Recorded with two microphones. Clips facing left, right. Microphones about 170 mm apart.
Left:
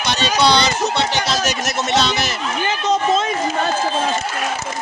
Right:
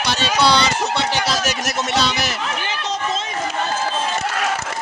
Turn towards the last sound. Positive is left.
turn(degrees=50)  # may be behind; listen again after turning